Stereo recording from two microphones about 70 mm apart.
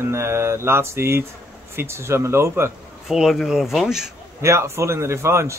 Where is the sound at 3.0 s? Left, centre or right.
Centre.